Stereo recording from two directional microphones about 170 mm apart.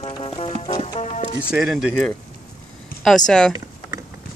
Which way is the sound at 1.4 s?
Centre (ahead or behind).